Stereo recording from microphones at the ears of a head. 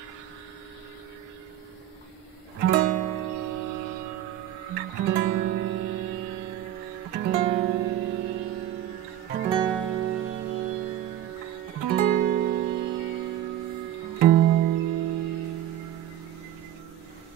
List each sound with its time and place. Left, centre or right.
2.6 s music: right